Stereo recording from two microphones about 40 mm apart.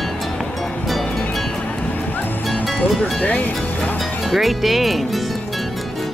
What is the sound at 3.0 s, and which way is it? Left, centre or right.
Speech, left.